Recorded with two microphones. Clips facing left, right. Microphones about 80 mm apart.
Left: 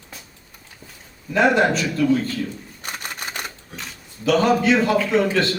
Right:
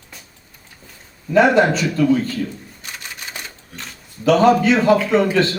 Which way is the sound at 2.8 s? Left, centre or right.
Left.